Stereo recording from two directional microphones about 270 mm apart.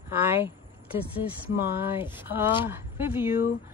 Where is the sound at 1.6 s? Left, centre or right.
Centre.